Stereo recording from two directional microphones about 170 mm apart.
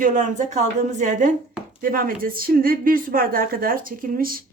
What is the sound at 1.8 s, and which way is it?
Speech, 55° right (ahead or behind).